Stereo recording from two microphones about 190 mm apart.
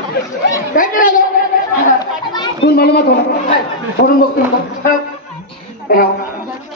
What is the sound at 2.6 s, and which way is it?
Speech, 55° left (ahead or behind).